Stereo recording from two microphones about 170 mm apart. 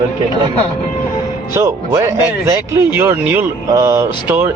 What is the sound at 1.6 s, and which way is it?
Speech, 15° right (ahead or behind).